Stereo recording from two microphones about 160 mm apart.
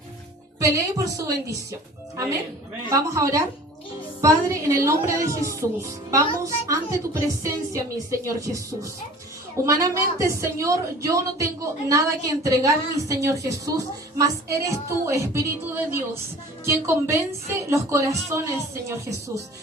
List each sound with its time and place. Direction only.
0.6 s speech: 20° right (ahead or behind)
2.9 s a woman's voice: 20° right (ahead or behind)